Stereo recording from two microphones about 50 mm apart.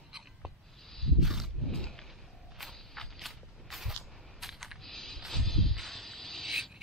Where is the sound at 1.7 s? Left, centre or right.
Centre.